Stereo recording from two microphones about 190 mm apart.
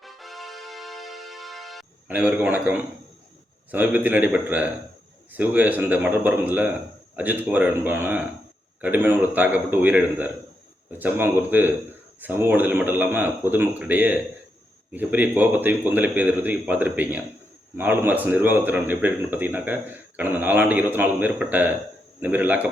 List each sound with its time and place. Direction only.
0.0 s music: centre (ahead or behind)
3.7 s speech: 10° right (ahead or behind)